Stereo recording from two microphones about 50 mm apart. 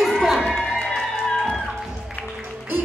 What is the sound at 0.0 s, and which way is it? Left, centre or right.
Music, centre.